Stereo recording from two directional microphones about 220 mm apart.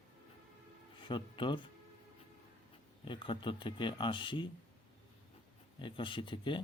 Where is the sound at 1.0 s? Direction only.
20° left (ahead or behind).